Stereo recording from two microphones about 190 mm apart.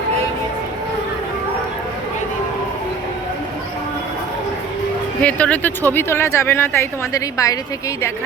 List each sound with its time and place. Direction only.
5.2 s speech: 5° left (ahead or behind)